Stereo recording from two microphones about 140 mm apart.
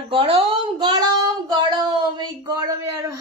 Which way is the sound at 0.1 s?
40° right (ahead or behind).